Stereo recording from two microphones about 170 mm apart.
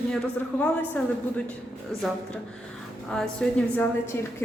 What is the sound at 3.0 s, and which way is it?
A woman's voice, 5° left (ahead or behind).